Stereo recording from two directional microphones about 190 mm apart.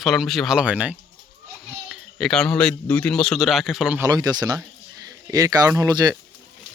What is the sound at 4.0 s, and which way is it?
Speech, 20° right (ahead or behind).